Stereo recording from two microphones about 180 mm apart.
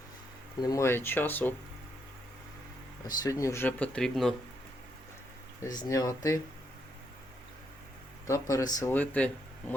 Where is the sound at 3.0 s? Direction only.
20° left (ahead or behind); by 4.3 s 5° left (ahead or behind).